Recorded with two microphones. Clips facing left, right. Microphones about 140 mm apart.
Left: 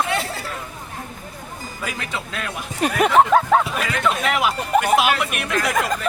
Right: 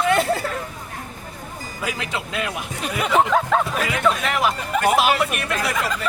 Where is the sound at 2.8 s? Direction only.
55° left (ahead or behind).